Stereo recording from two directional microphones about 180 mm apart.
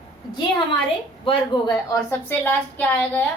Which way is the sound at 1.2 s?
25° left (ahead or behind).